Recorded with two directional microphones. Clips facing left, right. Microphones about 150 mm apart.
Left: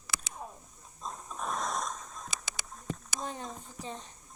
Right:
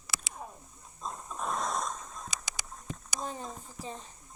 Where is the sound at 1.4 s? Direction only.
25° right (ahead or behind).